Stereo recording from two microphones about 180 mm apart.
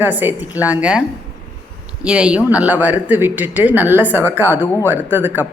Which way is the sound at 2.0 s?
5° right (ahead or behind).